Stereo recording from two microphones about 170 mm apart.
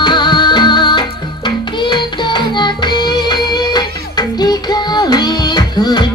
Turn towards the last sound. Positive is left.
turn(degrees=25)  # may be behind; listen again after turning